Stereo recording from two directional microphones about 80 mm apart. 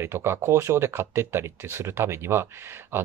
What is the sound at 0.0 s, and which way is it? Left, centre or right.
Speech, right.